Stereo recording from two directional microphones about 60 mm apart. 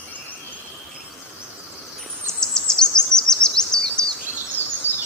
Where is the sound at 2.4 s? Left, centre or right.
Centre.